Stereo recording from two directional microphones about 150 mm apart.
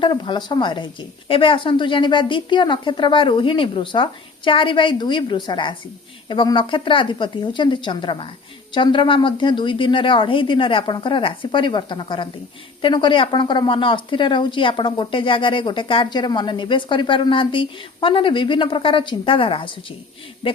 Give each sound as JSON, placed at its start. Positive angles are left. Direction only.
{"t": 0.0, "sound": "speech", "side_deg": 30}